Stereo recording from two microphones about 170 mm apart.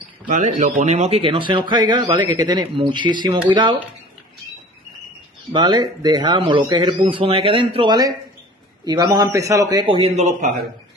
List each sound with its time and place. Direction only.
0.3 s a man's voice: 45° right (ahead or behind); by 3.7 s 25° right (ahead or behind)
5.5 s a man's voice: 25° right (ahead or behind); by 10.6 s 45° right (ahead or behind)